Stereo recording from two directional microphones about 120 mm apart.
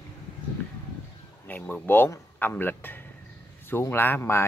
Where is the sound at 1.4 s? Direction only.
15° left (ahead or behind).